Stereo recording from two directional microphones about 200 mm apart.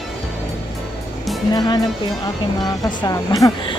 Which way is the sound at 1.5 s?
20° left (ahead or behind).